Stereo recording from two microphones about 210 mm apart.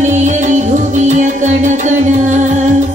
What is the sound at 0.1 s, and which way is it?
Music, 35° right (ahead or behind).